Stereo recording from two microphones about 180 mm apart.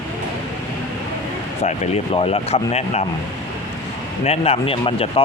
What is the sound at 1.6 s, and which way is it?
Speech, 40° left (ahead or behind).